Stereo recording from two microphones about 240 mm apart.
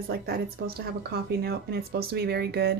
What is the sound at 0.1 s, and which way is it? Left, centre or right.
Speech, right.